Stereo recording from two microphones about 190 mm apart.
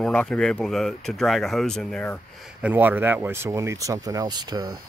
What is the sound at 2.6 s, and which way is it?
Speech, 10° right (ahead or behind).